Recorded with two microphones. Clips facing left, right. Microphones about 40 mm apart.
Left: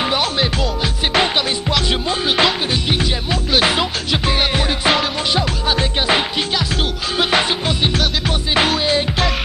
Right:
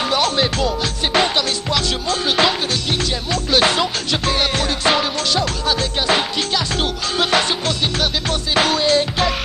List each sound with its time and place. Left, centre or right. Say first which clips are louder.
0.0 s music: right 1 dB; centre